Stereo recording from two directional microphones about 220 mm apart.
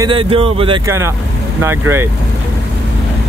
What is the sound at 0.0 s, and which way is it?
Speech, 25° right (ahead or behind).